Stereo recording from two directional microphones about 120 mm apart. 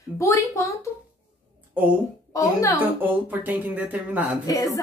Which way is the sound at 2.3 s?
25° left (ahead or behind).